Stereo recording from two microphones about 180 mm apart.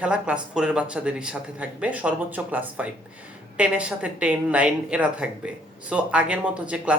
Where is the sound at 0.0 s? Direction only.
5° right (ahead or behind).